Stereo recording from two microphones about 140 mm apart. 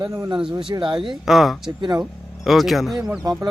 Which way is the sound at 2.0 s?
Centre (ahead or behind).